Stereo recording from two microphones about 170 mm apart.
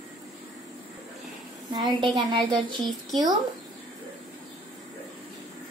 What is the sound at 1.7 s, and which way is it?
A woman's voice, 25° right (ahead or behind).